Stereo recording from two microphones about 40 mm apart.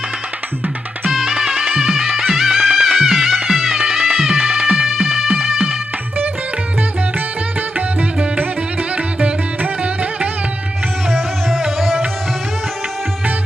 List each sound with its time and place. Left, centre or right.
1.1 s music: centre
4.2 s music: right
4.9 s music: centre
9.8 s music: right
11.8 s music: centre